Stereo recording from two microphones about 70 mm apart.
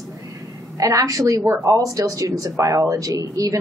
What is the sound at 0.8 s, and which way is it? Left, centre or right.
A woman's voice, right.